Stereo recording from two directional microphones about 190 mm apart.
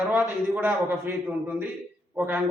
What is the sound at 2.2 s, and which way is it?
Speech, 10° right (ahead or behind).